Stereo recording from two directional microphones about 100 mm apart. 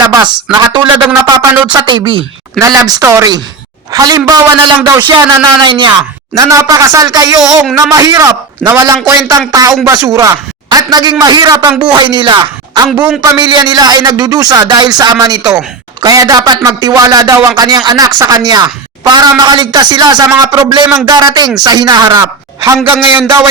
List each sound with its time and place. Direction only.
0.1 s speech: 40° right (ahead or behind)
1.7 s speech: 55° right (ahead or behind)
2.6 s a man's voice: 35° right (ahead or behind)
3.9 s speech: 40° right (ahead or behind)
6.3 s speech: 35° right (ahead or behind)
22.8 s a man's voice: 20° right (ahead or behind)